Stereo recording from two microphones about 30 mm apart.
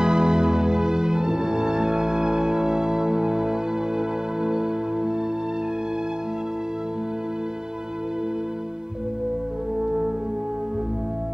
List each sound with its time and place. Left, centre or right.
0.0 s music: right